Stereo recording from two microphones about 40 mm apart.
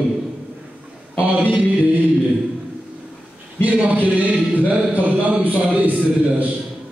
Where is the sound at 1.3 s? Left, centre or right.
Right.